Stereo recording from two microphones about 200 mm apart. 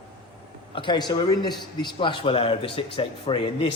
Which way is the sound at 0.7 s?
25° left (ahead or behind).